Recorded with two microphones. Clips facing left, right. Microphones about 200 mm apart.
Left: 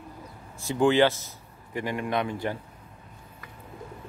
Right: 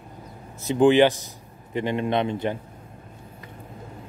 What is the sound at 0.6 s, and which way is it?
A man's voice, 20° right (ahead or behind).